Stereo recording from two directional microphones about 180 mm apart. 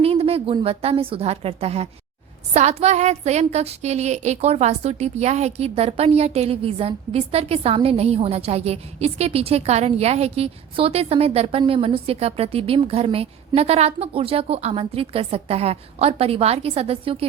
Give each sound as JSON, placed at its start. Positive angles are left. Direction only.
{"t": 0.0, "sound": "a woman's voice", "side_deg": -35}